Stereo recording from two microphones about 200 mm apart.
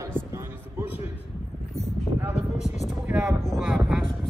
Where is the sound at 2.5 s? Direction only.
35° left (ahead or behind).